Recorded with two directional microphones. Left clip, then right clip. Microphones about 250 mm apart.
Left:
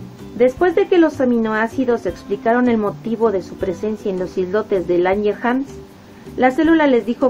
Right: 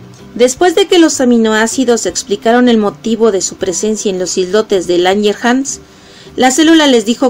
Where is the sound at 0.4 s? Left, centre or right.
Right.